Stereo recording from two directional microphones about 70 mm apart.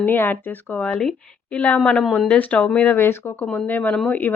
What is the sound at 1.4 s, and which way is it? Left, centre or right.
Speech, left.